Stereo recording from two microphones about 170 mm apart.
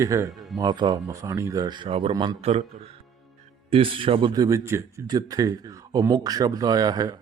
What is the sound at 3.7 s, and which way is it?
A man's voice, 35° right (ahead or behind).